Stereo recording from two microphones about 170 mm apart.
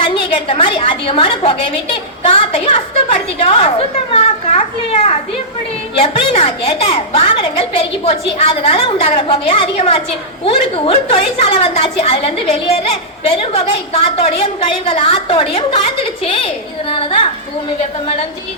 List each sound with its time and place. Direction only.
0.0 s a woman's voice: 30° left (ahead or behind)
3.3 s a woman's voice: 35° left (ahead or behind)